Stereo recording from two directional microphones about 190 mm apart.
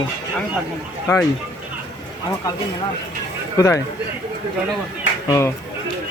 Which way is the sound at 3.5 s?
15° left (ahead or behind).